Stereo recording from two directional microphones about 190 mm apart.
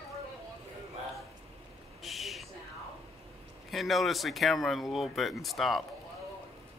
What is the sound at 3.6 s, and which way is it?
Speech, centre (ahead or behind).